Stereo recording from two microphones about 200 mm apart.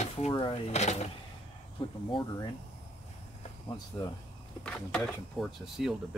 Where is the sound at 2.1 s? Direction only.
25° left (ahead or behind).